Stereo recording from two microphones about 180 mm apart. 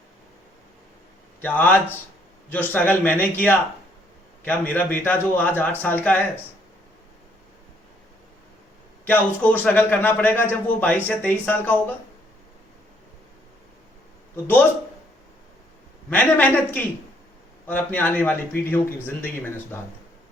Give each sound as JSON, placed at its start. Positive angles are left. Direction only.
{"t": 1.4, "sound": "a man's voice", "side_deg": 10}
{"t": 9.0, "sound": "a man's voice", "side_deg": 10}
{"t": 16.0, "sound": "a man's voice", "side_deg": 10}